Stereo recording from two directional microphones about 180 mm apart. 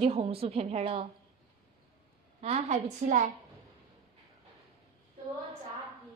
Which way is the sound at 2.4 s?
40° right (ahead or behind).